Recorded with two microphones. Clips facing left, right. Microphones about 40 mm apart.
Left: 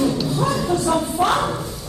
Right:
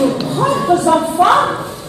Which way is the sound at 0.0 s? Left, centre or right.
Right.